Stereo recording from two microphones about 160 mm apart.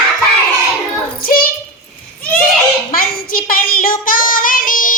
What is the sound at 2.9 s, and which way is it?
Child singing, 65° left (ahead or behind).